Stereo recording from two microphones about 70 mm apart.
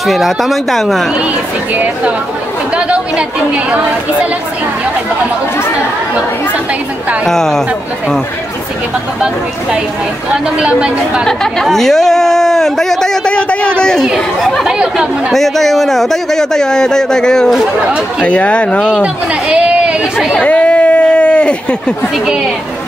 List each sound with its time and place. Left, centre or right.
0.0 s speech: centre
2.7 s a woman's voice: centre
7.2 s speech: centre
10.3 s a woman's voice: centre
11.2 s speech: centre
14.0 s a woman's voice: centre
15.3 s speech: centre
19.5 s chatter: centre
20.3 s a sound: centre